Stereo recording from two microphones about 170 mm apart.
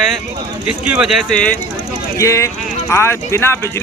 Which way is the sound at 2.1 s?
15° left (ahead or behind).